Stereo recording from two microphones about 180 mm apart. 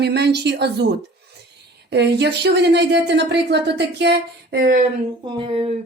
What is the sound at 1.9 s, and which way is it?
Speech, 70° right (ahead or behind).